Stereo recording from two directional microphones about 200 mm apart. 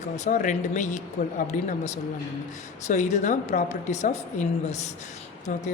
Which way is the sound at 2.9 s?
35° left (ahead or behind).